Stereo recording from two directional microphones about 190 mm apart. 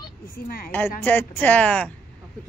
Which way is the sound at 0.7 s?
10° left (ahead or behind).